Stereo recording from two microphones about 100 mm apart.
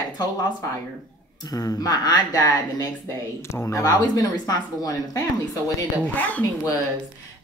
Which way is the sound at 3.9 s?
40° left (ahead or behind).